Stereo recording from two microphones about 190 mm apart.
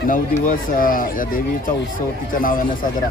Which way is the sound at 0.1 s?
45° left (ahead or behind).